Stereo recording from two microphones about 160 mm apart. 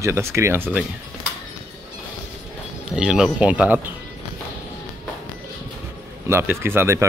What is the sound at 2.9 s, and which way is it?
Speech, 5° right (ahead or behind).